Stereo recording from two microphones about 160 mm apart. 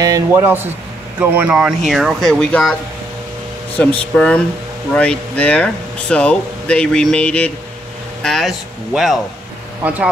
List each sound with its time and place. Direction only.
0.0 s speech: 20° right (ahead or behind); by 9.2 s centre (ahead or behind)